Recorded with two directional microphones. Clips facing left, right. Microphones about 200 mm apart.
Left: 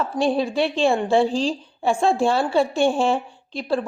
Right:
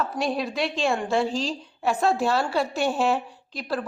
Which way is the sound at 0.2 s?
30° left (ahead or behind).